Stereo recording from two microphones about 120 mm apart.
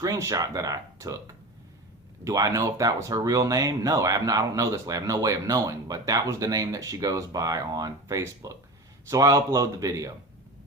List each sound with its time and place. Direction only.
0.0 s speech: 25° right (ahead or behind)
2.2 s speech: 30° right (ahead or behind)